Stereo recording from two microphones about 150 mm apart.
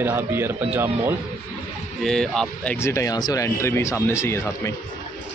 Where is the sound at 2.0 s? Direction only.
5° left (ahead or behind); by 4.7 s 20° left (ahead or behind).